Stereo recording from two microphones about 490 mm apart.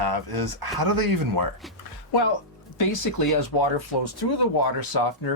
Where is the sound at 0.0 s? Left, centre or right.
Right.